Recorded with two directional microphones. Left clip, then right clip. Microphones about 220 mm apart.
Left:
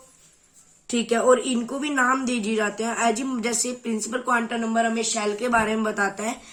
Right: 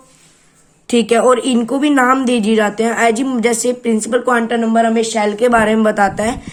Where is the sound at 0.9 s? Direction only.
40° right (ahead or behind).